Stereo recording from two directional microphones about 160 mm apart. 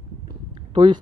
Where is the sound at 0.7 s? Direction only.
30° right (ahead or behind).